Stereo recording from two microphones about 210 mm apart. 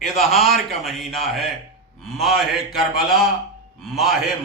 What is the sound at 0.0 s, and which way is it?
A man's voice, centre (ahead or behind).